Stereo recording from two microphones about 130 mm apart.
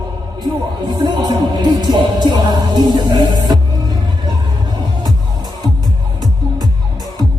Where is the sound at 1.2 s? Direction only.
35° right (ahead or behind).